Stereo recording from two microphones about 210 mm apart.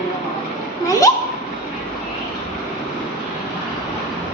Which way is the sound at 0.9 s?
15° left (ahead or behind).